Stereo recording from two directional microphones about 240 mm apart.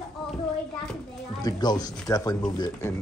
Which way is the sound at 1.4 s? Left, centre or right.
Centre.